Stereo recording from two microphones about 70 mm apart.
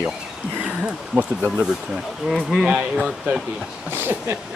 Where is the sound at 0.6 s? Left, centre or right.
Centre.